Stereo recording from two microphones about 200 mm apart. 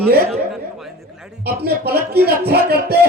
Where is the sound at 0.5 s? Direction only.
Centre (ahead or behind).